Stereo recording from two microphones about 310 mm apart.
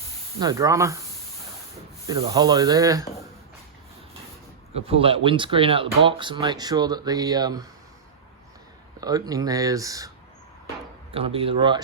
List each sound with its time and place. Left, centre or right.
0.3 s speech: centre
2.0 s speech: centre
4.7 s speech: centre
9.0 s speech: centre
11.1 s speech: centre